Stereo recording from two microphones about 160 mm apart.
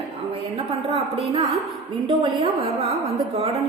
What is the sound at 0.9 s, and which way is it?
A woman's voice, 35° right (ahead or behind).